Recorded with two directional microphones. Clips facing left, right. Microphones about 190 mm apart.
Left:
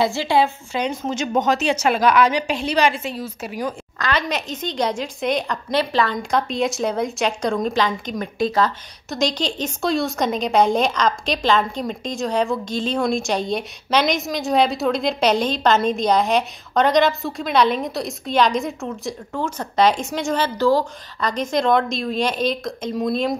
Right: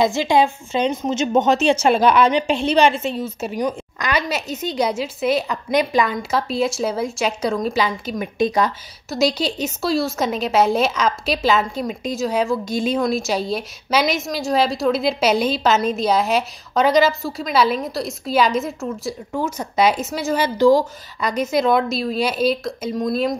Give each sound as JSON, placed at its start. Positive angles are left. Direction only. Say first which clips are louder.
{"t": 0.0, "sound": "a woman's voice", "louder": "right 2 dB", "side_deg": -20}